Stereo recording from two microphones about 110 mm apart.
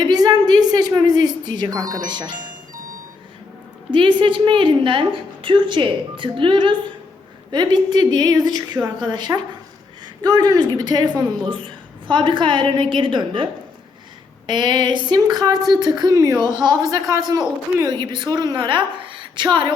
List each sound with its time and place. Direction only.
0.0 s speech: 40° right (ahead or behind)
3.9 s a woman's voice: 50° right (ahead or behind)